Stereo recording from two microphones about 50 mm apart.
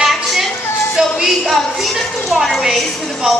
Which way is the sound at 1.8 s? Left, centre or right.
Centre.